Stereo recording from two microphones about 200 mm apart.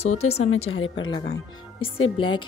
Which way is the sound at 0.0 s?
30° left (ahead or behind).